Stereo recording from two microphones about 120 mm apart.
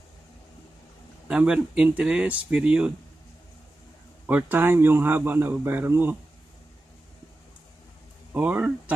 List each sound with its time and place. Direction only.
1.3 s speech: 10° right (ahead or behind)
4.3 s speech: 15° right (ahead or behind)
8.3 s speech: 15° right (ahead or behind)